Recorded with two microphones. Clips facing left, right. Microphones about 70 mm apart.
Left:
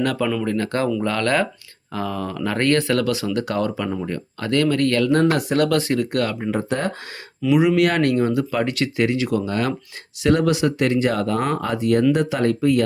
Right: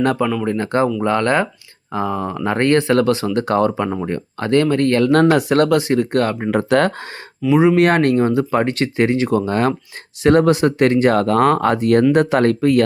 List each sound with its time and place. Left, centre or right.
0.4 s speech: right
5.0 s speech: right
5.6 s speech: right
6.5 s speech: right
7.4 s speech: centre
7.8 s speech: right